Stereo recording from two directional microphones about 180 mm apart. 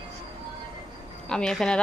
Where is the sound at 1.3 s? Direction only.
5° left (ahead or behind).